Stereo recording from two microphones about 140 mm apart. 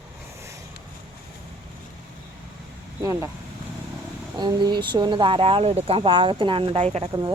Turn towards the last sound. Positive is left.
turn(degrees=-30)  # may be behind; listen again after turning